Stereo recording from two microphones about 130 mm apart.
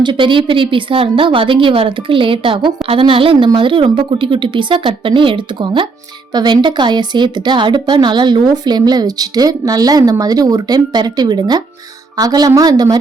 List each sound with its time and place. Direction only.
0.0 s a woman's voice: 40° right (ahead or behind)